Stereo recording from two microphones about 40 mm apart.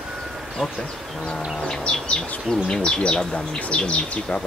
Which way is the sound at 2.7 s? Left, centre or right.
Left.